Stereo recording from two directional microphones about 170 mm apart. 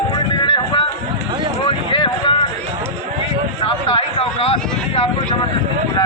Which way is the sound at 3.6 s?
30° left (ahead or behind).